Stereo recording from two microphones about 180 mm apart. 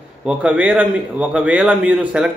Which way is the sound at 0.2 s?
5° right (ahead or behind).